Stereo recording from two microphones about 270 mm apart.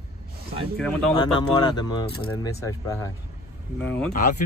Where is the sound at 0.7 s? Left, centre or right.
Centre.